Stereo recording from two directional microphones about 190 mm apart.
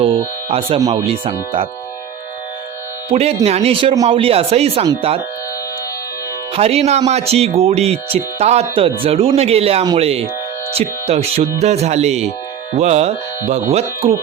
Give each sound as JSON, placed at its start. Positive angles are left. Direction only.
{"t": 1.0, "sound": "speech", "side_deg": -30}
{"t": 3.1, "sound": "speech", "side_deg": -35}
{"t": 6.5, "sound": "speech", "side_deg": -35}
{"t": 9.8, "sound": "speech", "side_deg": -20}
{"t": 10.8, "sound": "speech", "side_deg": -35}